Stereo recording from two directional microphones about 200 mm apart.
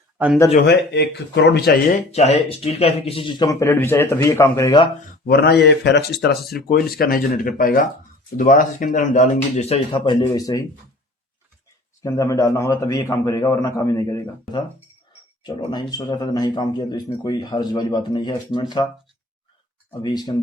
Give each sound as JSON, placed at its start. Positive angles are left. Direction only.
{"t": 0.5, "sound": "speech", "side_deg": 55}
{"t": 2.1, "sound": "speech", "side_deg": 30}
{"t": 5.2, "sound": "speech", "side_deg": 50}
{"t": 12.0, "sound": "speech", "side_deg": 15}
{"t": 19.9, "sound": "speech", "side_deg": 20}